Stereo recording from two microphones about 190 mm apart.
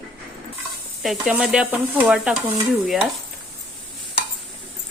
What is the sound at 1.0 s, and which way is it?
Sizzle, 5° right (ahead or behind).